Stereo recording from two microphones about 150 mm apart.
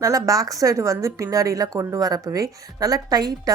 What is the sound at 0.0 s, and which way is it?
A woman's voice, 25° right (ahead or behind).